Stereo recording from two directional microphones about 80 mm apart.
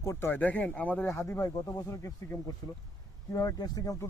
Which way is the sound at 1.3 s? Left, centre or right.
Left.